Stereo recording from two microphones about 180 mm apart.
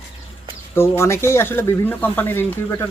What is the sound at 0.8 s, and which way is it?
Speech, 15° left (ahead or behind).